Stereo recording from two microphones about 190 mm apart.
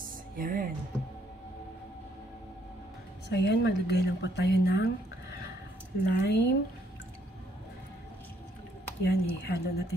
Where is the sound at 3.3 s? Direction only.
65° left (ahead or behind).